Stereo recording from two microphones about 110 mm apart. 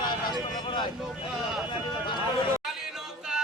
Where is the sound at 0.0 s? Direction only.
40° left (ahead or behind).